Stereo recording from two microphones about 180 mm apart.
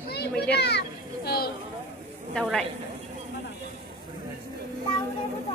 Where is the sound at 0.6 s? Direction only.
70° left (ahead or behind).